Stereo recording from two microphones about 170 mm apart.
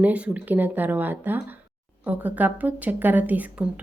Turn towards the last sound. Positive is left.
turn(degrees=-10)  # may be behind; listen again after turning